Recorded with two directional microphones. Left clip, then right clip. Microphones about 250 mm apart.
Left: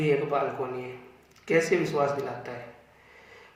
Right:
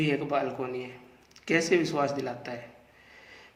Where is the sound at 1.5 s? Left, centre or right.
Right.